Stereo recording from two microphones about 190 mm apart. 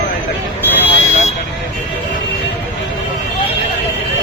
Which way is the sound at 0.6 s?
10° left (ahead or behind).